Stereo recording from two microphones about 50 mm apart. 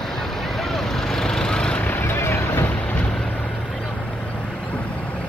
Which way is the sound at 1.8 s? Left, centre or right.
Left.